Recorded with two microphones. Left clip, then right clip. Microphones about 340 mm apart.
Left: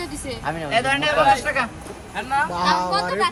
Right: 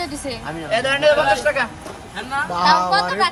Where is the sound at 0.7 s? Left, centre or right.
Centre.